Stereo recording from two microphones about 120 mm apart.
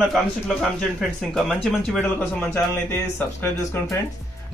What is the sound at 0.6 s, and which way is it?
Speech, centre (ahead or behind).